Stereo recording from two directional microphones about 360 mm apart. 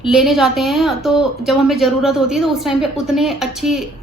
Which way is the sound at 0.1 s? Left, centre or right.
Centre.